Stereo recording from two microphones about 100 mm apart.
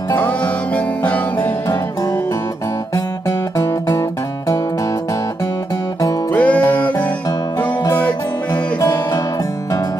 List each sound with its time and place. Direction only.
0.1 s music: 15° left (ahead or behind)
2.9 s music: 35° left (ahead or behind)
6.3 s music: 15° left (ahead or behind)
8.8 s music: 35° left (ahead or behind)